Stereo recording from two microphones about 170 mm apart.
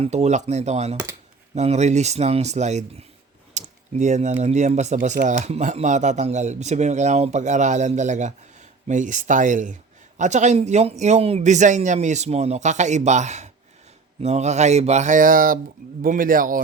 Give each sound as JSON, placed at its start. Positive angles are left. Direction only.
{"t": 0.0, "sound": "speech", "side_deg": -40}